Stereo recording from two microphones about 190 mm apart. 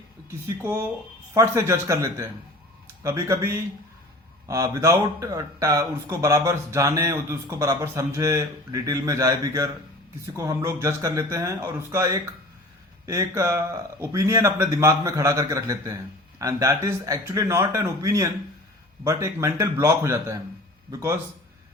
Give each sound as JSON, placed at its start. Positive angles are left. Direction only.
{"t": 0.3, "sound": "speech", "side_deg": -15}